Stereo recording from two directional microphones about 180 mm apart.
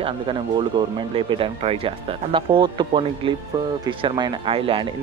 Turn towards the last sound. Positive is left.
turn(degrees=-30)  # may be behind; listen again after turning